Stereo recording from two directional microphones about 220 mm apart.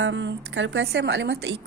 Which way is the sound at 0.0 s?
55° right (ahead or behind).